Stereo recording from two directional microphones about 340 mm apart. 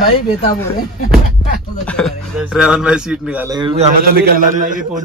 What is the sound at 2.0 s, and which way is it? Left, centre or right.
A man's voice, centre.